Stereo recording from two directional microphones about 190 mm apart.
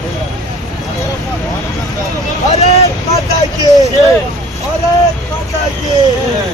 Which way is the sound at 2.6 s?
35° left (ahead or behind).